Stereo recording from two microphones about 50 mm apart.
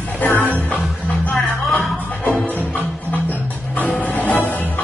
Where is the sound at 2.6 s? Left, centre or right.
Left.